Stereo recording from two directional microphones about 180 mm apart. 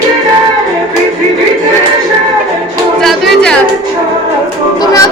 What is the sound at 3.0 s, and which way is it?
Music, centre (ahead or behind).